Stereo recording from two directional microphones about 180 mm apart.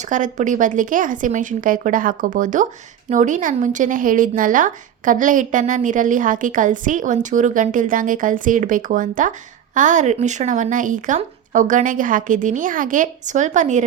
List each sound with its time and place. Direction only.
0.0 s a woman's voice: 45° right (ahead or behind)